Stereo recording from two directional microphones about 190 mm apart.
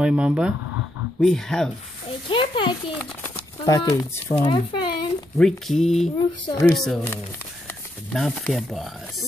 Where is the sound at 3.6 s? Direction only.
20° left (ahead or behind).